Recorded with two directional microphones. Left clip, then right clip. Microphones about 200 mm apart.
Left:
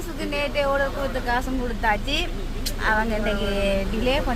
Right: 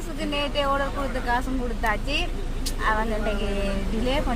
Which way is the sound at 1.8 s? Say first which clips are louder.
Left 3 dB; 10° left (ahead or behind).